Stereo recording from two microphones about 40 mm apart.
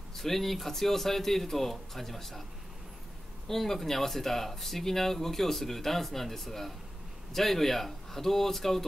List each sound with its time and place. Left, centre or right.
0.1 s speech: centre
3.4 s speech: centre